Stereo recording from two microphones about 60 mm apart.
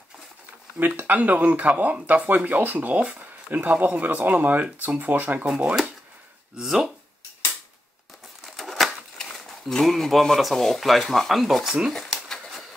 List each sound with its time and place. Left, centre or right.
0.7 s speech: right
6.6 s speech: centre
8.5 s a sound: centre
9.5 s speech: centre